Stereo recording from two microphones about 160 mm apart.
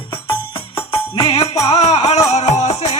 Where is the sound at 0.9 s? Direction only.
35° left (ahead or behind).